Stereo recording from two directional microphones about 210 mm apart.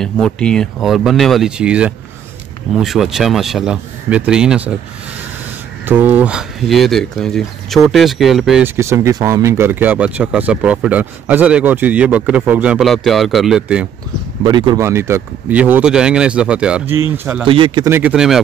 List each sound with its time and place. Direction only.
0.0 s speech: 5° left (ahead or behind)
5.9 s speech: 10° right (ahead or behind)
14.4 s speech: 20° right (ahead or behind); by 17.5 s 5° right (ahead or behind)
17.5 s speech: 25° right (ahead or behind)
17.9 s speech: 5° right (ahead or behind)